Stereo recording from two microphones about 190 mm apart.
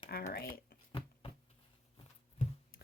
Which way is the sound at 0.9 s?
25° left (ahead or behind).